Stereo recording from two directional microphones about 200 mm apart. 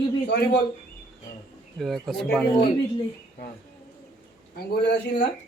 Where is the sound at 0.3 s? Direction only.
50° left (ahead or behind).